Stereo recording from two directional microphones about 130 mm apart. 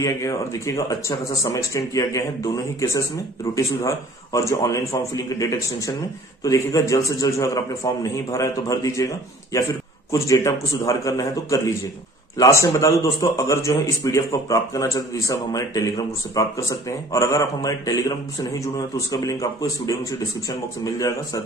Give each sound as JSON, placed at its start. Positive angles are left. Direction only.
{"t": 0.0, "sound": "a man's voice", "side_deg": 25}